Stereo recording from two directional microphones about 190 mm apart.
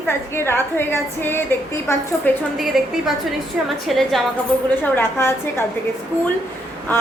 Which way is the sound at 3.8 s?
Centre (ahead or behind).